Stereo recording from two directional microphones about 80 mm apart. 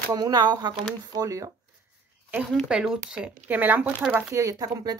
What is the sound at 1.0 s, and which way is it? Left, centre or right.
Speech, right.